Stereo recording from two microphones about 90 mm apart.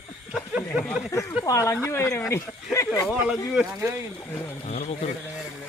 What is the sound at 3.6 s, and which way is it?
Speech, 5° right (ahead or behind).